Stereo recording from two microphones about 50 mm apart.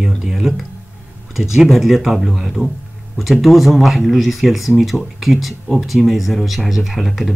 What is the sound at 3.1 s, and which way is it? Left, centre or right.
Speech, centre.